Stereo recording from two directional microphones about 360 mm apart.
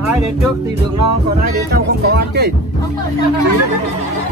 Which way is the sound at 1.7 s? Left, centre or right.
Right.